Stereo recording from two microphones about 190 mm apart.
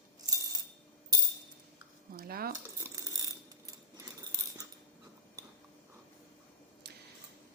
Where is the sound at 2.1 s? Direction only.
50° right (ahead or behind).